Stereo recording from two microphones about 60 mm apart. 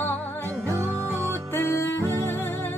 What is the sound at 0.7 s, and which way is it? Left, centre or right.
Music, right.